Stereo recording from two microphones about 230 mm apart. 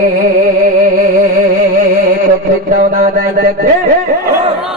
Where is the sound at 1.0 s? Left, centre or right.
Right.